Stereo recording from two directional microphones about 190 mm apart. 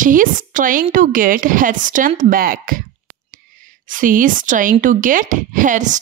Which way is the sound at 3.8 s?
45° right (ahead or behind).